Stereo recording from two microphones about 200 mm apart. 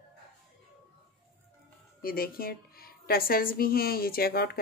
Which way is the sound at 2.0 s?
45° left (ahead or behind).